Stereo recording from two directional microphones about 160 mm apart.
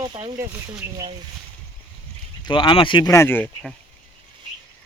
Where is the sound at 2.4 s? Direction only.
30° left (ahead or behind).